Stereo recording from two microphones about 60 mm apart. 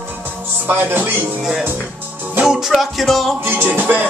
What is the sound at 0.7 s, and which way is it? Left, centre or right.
Music, right.